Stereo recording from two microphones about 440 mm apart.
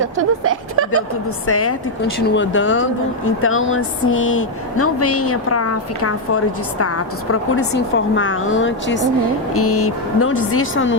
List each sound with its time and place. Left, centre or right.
0.0 s speech: right
1.5 s speech: left